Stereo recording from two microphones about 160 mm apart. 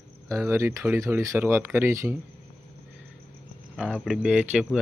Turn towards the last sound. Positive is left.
turn(degrees=-5)  # may be behind; listen again after turning